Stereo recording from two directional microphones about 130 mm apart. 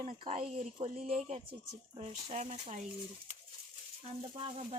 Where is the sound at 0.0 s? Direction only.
55° right (ahead or behind).